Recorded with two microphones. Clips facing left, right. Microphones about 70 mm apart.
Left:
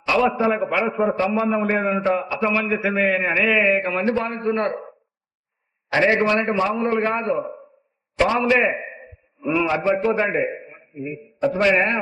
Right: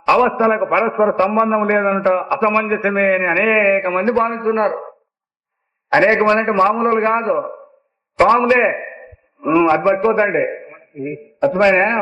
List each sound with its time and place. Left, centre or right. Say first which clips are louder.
0.0 s a sound: right 6 dB; right
0.3 s a man's voice: right 5 dB; right
1.1 s a man's voice: right 6 dB; right
5.9 s a man's voice: right 5 dB; right
8.4 s a man's voice: right 5 dB; right
9.0 s a sound: right 5 dB; centre
9.5 s a man's voice: right 7 dB; right
10.9 s a man's voice: right 5 dB; centre
11.4 s a man's voice: right 5 dB; right